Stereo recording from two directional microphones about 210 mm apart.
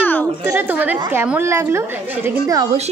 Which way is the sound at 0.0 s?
10° left (ahead or behind).